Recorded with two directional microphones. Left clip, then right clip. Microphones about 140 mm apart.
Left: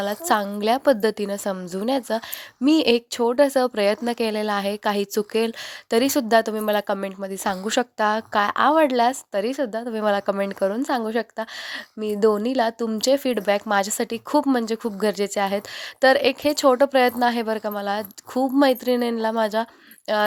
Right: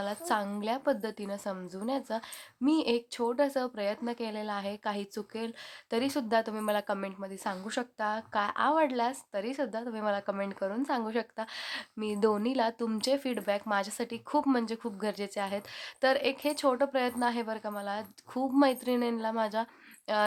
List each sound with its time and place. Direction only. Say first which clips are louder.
0.0 s a woman's voice: left 10 dB; 45° left (ahead or behind)